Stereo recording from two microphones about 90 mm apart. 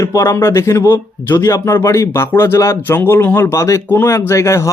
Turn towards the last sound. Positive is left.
turn(degrees=35)  # may be behind; listen again after turning